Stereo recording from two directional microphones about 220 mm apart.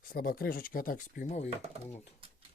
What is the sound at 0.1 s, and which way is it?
Speech, 40° left (ahead or behind).